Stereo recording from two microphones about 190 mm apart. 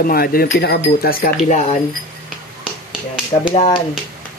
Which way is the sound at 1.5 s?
35° left (ahead or behind).